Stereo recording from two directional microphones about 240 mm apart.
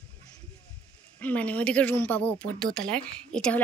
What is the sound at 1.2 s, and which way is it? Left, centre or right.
Speech, centre.